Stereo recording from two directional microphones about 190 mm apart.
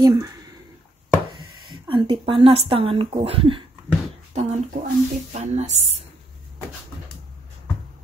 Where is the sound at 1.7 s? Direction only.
25° right (ahead or behind).